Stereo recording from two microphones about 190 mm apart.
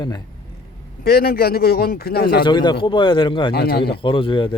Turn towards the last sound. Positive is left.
turn(degrees=25)  # may be behind; listen again after turning